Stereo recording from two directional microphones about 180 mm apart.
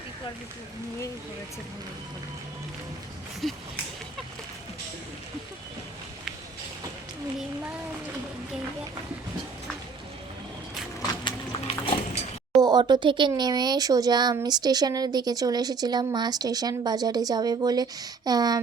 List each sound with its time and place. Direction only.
3.4 s speech: centre (ahead or behind)
11.1 s horse: 25° left (ahead or behind)
12.6 s speech: 25° right (ahead or behind)